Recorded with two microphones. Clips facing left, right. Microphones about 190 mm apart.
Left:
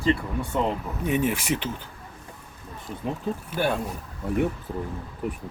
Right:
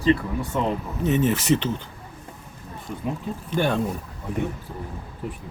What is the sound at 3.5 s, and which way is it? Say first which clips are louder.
Speech: right 3 dB; 10° left (ahead or behind).